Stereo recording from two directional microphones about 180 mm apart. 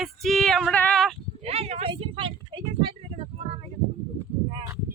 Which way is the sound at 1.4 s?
35° right (ahead or behind).